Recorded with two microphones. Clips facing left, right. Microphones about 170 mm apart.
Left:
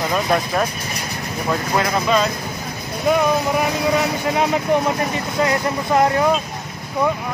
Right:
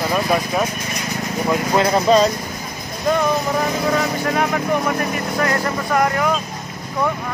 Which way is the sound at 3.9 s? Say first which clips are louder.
Even; 20° left (ahead or behind).